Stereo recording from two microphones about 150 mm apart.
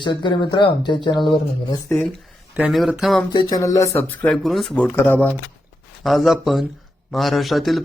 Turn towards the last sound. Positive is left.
turn(degrees=0)  # may be behind; listen again after turning